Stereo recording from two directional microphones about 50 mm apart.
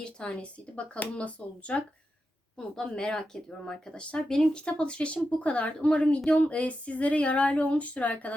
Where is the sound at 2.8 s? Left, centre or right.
Centre.